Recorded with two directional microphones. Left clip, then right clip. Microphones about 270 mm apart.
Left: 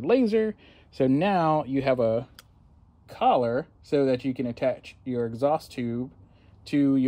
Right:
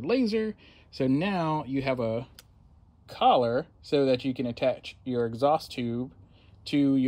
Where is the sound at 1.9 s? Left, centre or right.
Centre.